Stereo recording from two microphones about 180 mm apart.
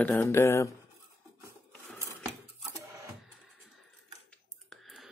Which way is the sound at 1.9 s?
15° right (ahead or behind).